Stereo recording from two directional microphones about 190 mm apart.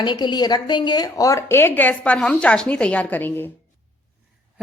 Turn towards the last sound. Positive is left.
turn(degrees=10)  # may be behind; listen again after turning